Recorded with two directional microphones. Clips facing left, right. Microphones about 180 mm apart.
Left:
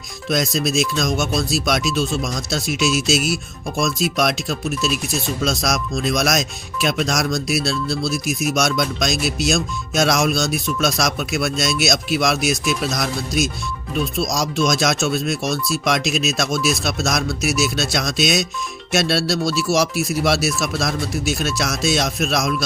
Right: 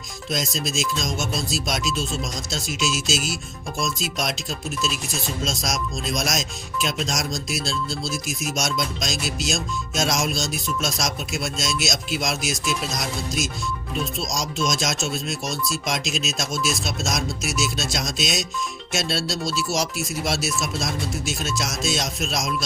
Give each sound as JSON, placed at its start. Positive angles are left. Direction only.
{"t": 0.3, "sound": "speech", "side_deg": 65}